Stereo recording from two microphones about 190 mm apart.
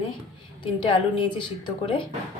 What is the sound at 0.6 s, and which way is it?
Speech, 25° left (ahead or behind).